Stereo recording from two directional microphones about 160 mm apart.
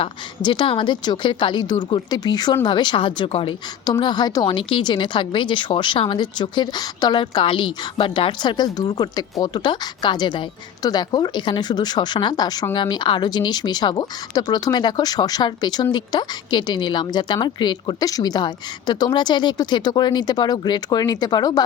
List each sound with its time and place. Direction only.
0.0 s speech: 30° left (ahead or behind)